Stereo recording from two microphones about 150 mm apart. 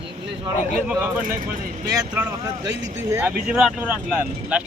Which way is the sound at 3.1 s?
10° right (ahead or behind).